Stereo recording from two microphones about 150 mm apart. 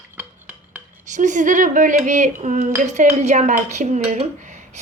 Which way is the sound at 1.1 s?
55° right (ahead or behind).